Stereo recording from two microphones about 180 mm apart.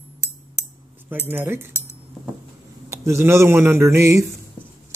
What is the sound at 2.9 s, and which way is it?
Speech, 15° right (ahead or behind).